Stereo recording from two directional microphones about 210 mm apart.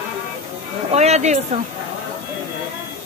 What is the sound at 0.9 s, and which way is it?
Speech, 30° right (ahead or behind).